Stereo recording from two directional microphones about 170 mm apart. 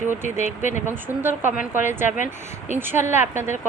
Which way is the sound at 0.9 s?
10° right (ahead or behind).